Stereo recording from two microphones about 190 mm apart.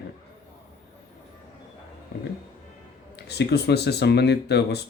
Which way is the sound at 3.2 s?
60° left (ahead or behind).